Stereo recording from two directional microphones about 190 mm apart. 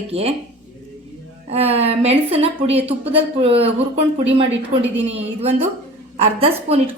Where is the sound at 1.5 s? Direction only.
30° right (ahead or behind).